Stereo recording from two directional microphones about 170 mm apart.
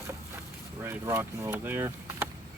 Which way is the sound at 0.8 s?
15° right (ahead or behind).